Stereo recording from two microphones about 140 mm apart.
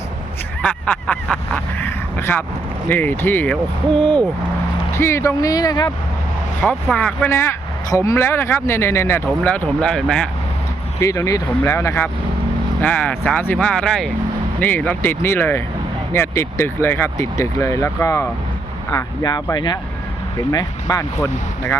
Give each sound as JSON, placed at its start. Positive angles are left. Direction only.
{"t": 0.6, "sound": "speech", "side_deg": 5}
{"t": 4.9, "sound": "speech", "side_deg": 20}
{"t": 6.9, "sound": "speech", "side_deg": 10}
{"t": 11.0, "sound": "speech", "side_deg": 20}